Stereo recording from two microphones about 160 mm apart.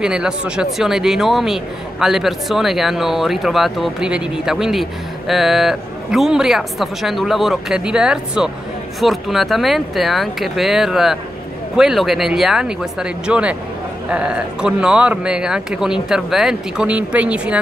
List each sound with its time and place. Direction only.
0.0 s speech: 5° right (ahead or behind)